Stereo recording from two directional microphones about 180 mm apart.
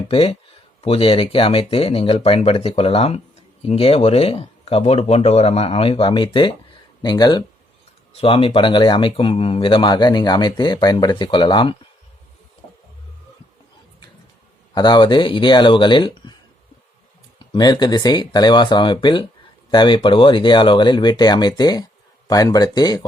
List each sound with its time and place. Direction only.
0.1 s speech: 30° left (ahead or behind)
14.8 s speech: 25° left (ahead or behind)
17.5 s speech: 25° left (ahead or behind)